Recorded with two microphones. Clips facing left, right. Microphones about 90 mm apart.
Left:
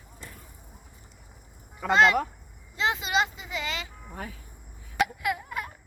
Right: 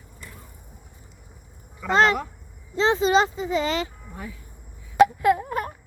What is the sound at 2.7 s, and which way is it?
A child's voice, 35° right (ahead or behind).